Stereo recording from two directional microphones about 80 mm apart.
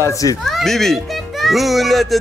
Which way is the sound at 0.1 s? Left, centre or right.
Left.